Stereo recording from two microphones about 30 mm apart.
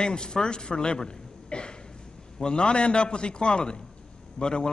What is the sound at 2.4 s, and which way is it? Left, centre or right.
A man's voice, left.